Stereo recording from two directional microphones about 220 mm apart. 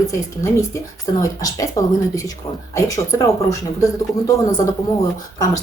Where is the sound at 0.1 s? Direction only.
15° left (ahead or behind).